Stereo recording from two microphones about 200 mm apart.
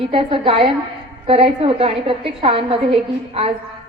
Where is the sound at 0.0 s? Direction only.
25° right (ahead or behind).